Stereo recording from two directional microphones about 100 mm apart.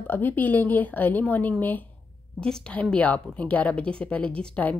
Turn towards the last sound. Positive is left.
turn(degrees=10)  # may be behind; listen again after turning